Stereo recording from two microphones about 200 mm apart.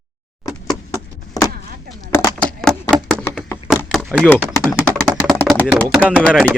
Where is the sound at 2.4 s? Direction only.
5° left (ahead or behind).